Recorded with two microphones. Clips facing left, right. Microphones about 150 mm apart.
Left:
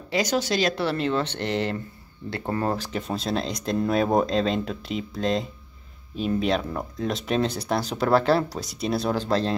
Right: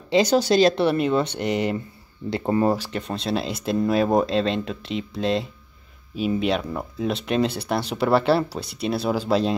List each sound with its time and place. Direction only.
0.1 s speech: 30° right (ahead or behind)
0.8 s speech: 15° right (ahead or behind)
2.9 s speech: 5° left (ahead or behind)